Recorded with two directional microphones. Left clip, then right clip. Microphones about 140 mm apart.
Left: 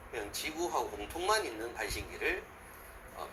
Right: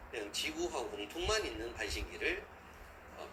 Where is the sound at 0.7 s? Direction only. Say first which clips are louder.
Left 4 dB; 15° right (ahead or behind).